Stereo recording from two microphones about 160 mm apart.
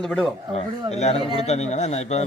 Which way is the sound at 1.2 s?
30° right (ahead or behind).